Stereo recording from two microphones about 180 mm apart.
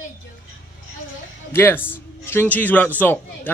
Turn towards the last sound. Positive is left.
turn(degrees=10)  # may be behind; listen again after turning